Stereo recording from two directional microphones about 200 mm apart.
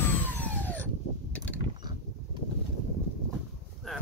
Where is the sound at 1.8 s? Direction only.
20° right (ahead or behind).